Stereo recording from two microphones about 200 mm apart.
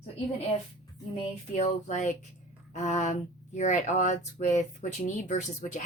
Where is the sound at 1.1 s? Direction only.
35° left (ahead or behind).